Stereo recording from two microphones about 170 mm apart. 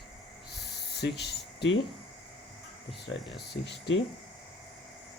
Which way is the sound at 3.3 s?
85° left.